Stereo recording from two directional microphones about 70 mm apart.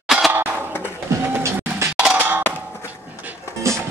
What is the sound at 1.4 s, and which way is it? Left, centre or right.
Music, right.